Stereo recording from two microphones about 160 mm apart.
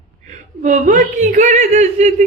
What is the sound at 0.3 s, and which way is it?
Speech, 50° right (ahead or behind).